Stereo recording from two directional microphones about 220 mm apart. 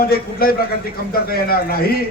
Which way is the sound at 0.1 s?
45° left (ahead or behind).